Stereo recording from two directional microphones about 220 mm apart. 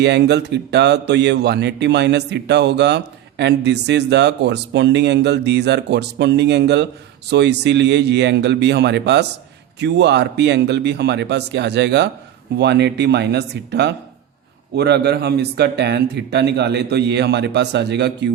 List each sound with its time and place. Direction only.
0.0 s a man's voice: 50° right (ahead or behind)